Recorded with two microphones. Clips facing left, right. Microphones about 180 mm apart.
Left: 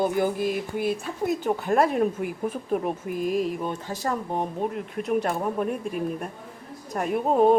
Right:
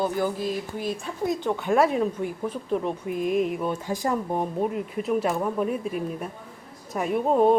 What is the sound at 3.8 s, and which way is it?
Speech, 15° right (ahead or behind).